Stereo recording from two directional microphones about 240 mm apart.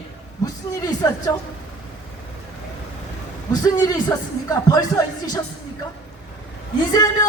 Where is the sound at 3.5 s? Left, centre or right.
Centre.